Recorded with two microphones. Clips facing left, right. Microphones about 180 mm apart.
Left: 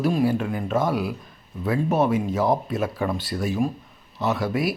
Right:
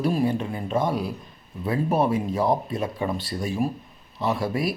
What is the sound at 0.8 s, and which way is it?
Speech, centre (ahead or behind).